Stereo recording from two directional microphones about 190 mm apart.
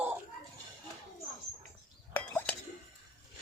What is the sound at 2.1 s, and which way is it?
Chink, 10° left (ahead or behind).